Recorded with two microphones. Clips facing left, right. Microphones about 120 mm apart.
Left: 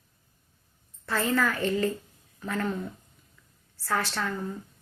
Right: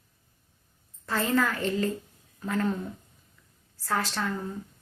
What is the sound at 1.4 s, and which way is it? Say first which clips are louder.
Speech: even; 30° right (ahead or behind).